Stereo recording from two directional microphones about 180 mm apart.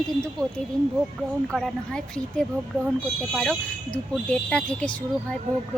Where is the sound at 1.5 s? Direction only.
5° left (ahead or behind).